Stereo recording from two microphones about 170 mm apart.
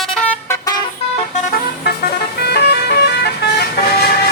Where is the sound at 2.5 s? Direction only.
75° left (ahead or behind).